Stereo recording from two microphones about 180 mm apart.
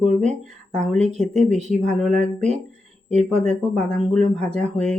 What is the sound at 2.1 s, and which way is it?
Speech, 40° right (ahead or behind).